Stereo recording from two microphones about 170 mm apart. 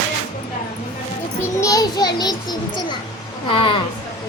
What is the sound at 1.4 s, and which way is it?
A child's voice, 20° left (ahead or behind).